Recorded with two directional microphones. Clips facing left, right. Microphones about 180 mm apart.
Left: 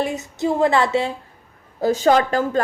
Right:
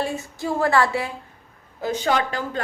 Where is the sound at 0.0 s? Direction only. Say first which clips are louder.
Left 4 dB; 20° left (ahead or behind).